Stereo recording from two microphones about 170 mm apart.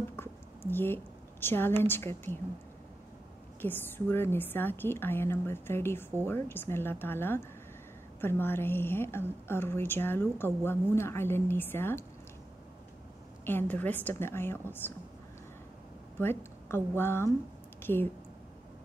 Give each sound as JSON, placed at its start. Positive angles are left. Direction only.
{"t": 0.1, "sound": "a woman's voice", "side_deg": 10}
{"t": 3.6, "sound": "a woman's voice", "side_deg": 10}
{"t": 13.5, "sound": "a woman's voice", "side_deg": 10}
{"t": 16.2, "sound": "a woman's voice", "side_deg": 15}